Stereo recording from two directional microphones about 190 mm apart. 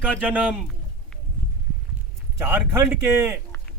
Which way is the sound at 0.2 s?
5° right (ahead or behind).